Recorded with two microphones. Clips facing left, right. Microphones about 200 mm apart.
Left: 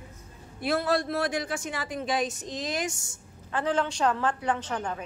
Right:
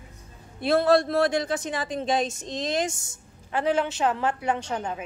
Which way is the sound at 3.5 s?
10° right (ahead or behind).